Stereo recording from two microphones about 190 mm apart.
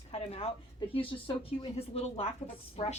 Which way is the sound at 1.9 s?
30° left (ahead or behind).